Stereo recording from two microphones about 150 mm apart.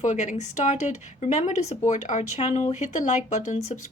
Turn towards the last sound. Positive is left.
turn(degrees=50)  # may be behind; listen again after turning